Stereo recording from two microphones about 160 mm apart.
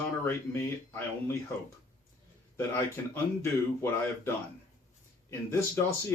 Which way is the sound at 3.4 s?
15° left (ahead or behind).